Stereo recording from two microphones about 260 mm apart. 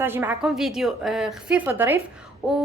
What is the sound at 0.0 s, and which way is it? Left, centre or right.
A woman's voice, centre.